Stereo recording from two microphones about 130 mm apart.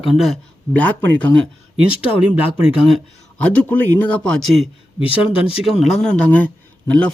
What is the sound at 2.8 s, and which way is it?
Speech, 5° right (ahead or behind).